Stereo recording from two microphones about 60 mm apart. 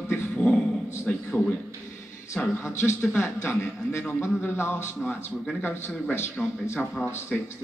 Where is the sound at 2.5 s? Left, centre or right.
Left.